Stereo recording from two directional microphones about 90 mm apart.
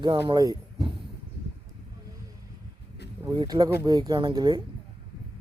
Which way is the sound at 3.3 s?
50° right (ahead or behind).